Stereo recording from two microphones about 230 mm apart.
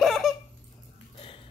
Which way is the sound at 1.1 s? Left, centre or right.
Left.